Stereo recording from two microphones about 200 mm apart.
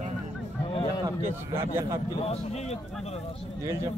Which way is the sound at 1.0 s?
25° right (ahead or behind).